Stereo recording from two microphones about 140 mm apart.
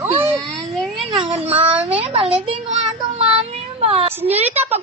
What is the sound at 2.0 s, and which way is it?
Speech, 40° right (ahead or behind).